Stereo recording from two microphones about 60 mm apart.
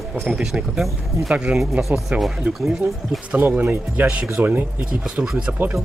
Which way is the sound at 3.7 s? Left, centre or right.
Right.